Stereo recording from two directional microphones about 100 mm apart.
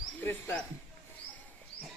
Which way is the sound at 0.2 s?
20° left (ahead or behind).